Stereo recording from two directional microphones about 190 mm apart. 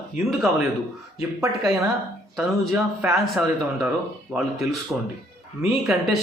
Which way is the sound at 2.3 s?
Centre (ahead or behind).